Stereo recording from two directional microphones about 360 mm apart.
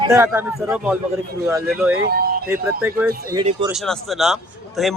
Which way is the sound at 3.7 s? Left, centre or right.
Centre.